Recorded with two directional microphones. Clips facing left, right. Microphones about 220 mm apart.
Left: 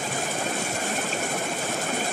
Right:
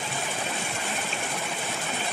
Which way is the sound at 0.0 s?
45° left (ahead or behind).